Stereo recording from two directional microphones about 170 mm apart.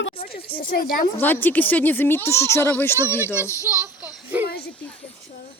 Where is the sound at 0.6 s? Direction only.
60° left (ahead or behind).